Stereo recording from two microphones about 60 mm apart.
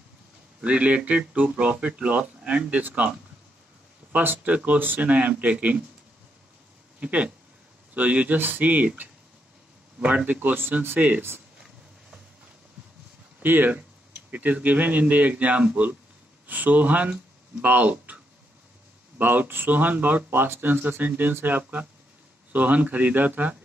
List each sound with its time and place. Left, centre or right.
0.7 s speech: right
7.0 s speech: right
13.4 s speech: right